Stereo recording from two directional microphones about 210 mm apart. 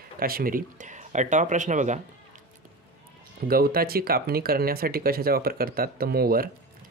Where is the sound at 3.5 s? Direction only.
45° right (ahead or behind).